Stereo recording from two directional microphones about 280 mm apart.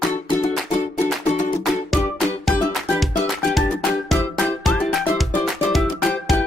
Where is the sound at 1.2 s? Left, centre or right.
Left.